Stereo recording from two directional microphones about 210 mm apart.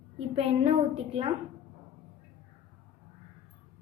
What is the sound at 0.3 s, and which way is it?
Speech, 30° right (ahead or behind).